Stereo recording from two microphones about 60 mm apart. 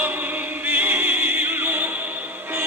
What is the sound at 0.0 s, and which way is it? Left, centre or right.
Music, right.